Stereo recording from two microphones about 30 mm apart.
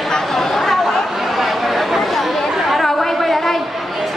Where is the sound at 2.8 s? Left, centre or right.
Centre.